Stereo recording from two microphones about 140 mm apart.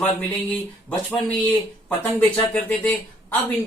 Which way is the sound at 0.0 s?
10° left (ahead or behind).